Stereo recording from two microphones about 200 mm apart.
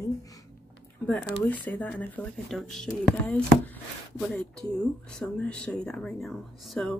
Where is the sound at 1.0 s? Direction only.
5° left (ahead or behind).